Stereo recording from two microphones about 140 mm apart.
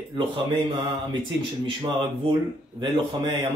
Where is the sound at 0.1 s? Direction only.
35° right (ahead or behind).